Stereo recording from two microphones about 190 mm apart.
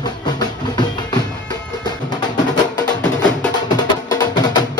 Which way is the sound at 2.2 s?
20° left (ahead or behind).